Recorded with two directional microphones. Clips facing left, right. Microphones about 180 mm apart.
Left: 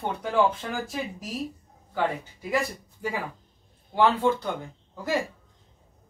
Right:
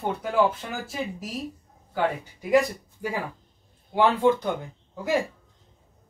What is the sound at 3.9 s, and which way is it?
Speech, 15° right (ahead or behind).